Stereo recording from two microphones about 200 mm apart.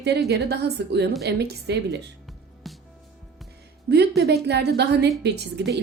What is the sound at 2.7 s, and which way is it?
Music, centre (ahead or behind).